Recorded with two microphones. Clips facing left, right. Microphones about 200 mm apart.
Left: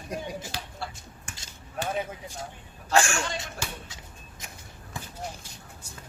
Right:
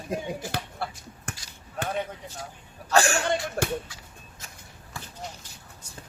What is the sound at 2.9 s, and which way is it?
Speech, 35° right (ahead or behind).